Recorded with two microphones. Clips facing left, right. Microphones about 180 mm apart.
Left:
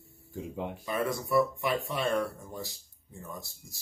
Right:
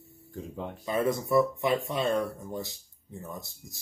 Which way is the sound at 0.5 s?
10° left (ahead or behind).